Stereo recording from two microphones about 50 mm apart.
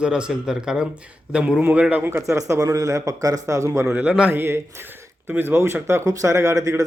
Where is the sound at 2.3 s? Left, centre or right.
Right.